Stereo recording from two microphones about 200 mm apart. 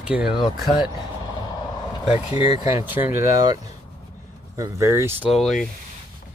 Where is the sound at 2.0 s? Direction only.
30° left (ahead or behind).